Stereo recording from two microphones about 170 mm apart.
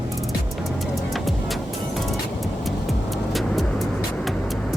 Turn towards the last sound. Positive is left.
turn(degrees=0)  # may be behind; listen again after turning